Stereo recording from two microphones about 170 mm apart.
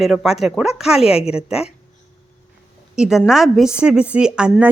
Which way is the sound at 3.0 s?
5° right (ahead or behind).